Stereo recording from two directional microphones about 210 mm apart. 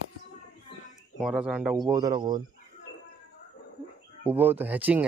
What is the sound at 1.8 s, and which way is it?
Speech, 15° right (ahead or behind).